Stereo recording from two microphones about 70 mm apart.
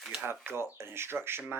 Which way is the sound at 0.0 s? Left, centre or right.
Centre.